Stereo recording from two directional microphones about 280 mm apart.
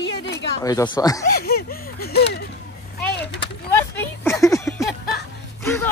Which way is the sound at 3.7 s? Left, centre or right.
Centre.